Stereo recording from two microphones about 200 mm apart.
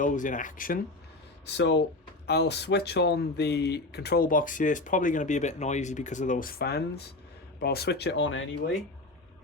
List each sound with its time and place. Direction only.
0.0 s speech: 40° left (ahead or behind)
1.5 s speech: 60° left (ahead or behind)